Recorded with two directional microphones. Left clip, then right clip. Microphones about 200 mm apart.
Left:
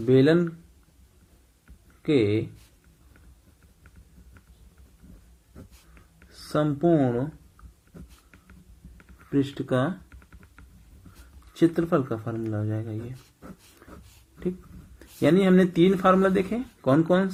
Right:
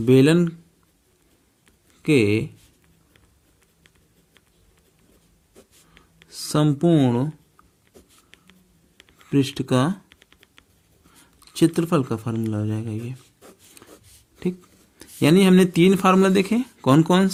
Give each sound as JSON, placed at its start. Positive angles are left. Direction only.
{"t": 0.0, "sound": "speech", "side_deg": -65}
{"t": 2.0, "sound": "speech", "side_deg": -70}
{"t": 6.3, "sound": "speech", "side_deg": -60}
{"t": 9.3, "sound": "speech", "side_deg": -60}
{"t": 10.2, "sound": "computer keyboard", "side_deg": -35}
{"t": 11.5, "sound": "speech", "side_deg": -65}
{"t": 13.8, "sound": "a sound", "side_deg": -60}
{"t": 14.9, "sound": "speech", "side_deg": -65}